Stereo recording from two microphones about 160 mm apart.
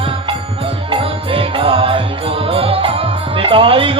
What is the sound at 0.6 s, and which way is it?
Music, 35° right (ahead or behind).